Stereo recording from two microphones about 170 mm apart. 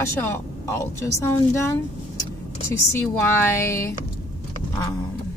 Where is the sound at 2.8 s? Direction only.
15° left (ahead or behind).